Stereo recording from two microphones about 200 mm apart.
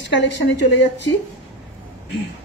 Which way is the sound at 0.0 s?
65° left (ahead or behind).